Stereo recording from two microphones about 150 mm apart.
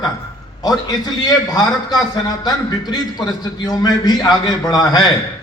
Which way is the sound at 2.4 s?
25° left (ahead or behind).